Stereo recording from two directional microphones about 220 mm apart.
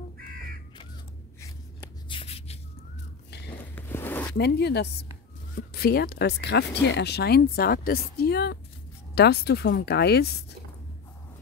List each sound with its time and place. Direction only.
2.0 s shuffle: 25° left (ahead or behind)
3.5 s a sound: 10° left (ahead or behind)
4.4 s speech: 50° left (ahead or behind)